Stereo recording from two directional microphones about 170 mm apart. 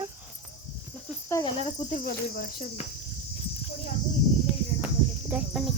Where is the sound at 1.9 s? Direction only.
60° left (ahead or behind).